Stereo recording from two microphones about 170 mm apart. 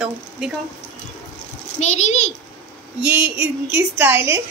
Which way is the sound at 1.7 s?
45° left (ahead or behind).